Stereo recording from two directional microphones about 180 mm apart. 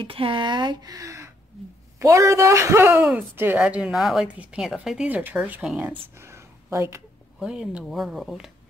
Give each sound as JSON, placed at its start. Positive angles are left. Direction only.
{"t": 0.0, "sound": "speech", "side_deg": -30}
{"t": 7.3, "sound": "speech", "side_deg": -5}